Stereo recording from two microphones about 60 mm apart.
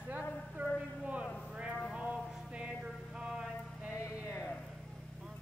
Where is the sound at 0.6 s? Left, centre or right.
Right.